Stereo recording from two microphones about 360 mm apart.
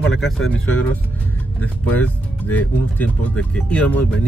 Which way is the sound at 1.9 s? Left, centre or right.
Centre.